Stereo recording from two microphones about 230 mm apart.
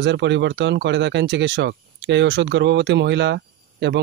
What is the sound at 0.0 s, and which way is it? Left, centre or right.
Speech, right.